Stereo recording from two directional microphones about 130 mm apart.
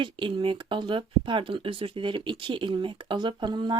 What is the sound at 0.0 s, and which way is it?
Speech, 40° right (ahead or behind).